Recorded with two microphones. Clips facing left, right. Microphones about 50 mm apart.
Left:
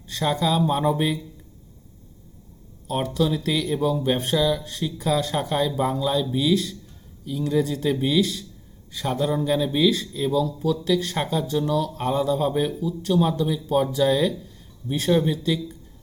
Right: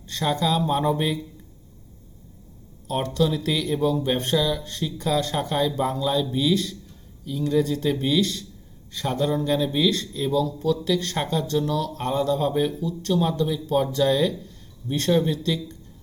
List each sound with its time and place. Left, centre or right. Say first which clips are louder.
0.0 s speech: left 1 dB; centre
2.8 s speech: even; centre